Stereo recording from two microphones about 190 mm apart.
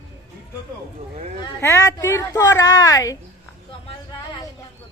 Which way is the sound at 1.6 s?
15° left (ahead or behind).